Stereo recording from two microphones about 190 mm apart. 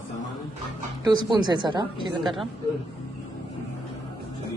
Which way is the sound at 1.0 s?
20° right (ahead or behind).